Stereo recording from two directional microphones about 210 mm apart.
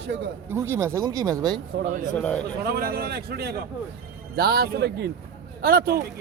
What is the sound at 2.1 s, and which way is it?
Speech, 5° left (ahead or behind).